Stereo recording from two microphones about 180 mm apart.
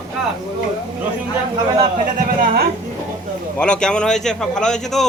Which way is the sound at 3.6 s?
5° left (ahead or behind).